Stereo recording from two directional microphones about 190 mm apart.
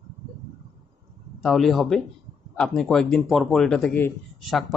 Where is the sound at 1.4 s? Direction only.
Centre (ahead or behind).